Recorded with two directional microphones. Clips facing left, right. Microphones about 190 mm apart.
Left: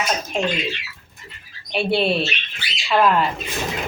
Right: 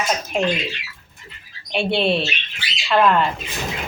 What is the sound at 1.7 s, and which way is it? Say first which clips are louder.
Speech: even; 5° left (ahead or behind).